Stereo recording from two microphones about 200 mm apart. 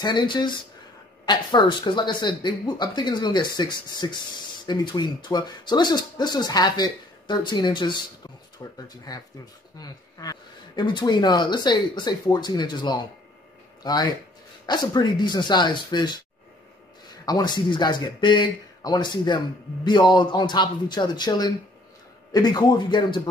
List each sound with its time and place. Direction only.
0.0 s speech: 20° left (ahead or behind)
17.2 s speech: 20° left (ahead or behind)